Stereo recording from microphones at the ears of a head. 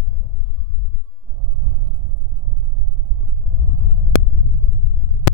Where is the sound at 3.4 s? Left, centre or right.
Left.